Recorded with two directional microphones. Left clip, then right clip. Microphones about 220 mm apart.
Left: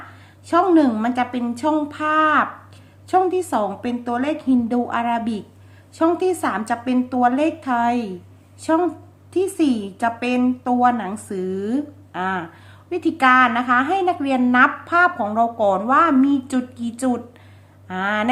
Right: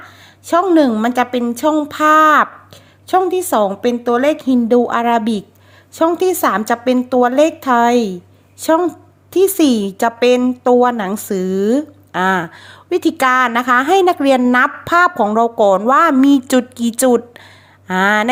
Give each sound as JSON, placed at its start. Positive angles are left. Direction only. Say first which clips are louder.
{"t": 0.4, "sound": "a woman's voice", "louder": "right 4 dB", "side_deg": -40}